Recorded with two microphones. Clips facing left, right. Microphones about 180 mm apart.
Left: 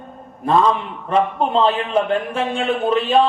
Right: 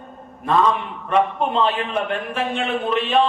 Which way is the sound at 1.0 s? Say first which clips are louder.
Left 1 dB; 30° left (ahead or behind).